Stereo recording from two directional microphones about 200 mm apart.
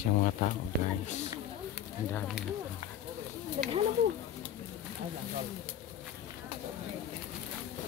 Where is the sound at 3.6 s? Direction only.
25° right (ahead or behind).